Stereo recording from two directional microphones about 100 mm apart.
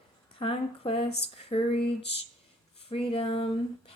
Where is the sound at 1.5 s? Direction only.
90° left.